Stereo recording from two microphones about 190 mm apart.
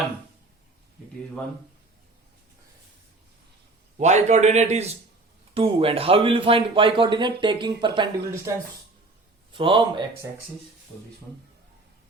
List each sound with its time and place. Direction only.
3.9 s a man's voice: 35° right (ahead or behind)